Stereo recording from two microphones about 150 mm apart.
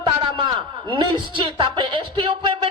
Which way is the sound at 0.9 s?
35° right (ahead or behind).